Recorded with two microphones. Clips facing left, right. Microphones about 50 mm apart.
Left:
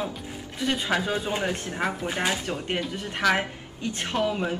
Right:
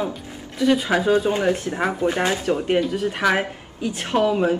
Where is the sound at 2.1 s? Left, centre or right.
Centre.